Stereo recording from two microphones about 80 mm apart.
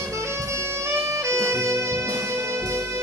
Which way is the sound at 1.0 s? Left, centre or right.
Right.